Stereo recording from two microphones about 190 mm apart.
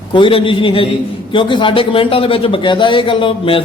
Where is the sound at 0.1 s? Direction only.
25° left (ahead or behind).